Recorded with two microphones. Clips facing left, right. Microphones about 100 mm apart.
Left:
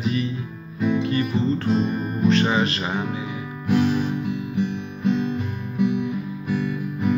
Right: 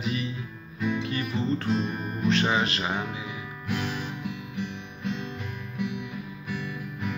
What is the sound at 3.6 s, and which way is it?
Music, 30° left (ahead or behind).